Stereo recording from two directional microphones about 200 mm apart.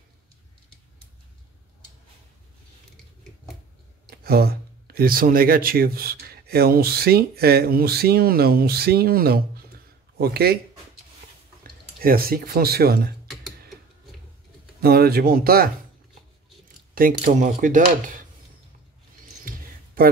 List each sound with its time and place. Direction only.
4.1 s speech: 50° right (ahead or behind)
12.0 s speech: 45° right (ahead or behind)
14.8 s speech: 50° right (ahead or behind)
16.9 s speech: 40° right (ahead or behind)